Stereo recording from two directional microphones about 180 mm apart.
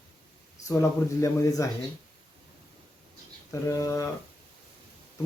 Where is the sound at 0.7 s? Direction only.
15° left (ahead or behind).